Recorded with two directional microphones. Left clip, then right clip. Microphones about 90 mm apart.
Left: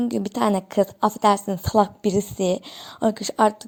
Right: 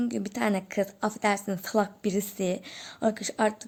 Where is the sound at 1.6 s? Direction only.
45° left (ahead or behind).